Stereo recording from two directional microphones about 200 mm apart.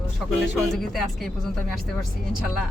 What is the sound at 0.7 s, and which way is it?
Speech, centre (ahead or behind).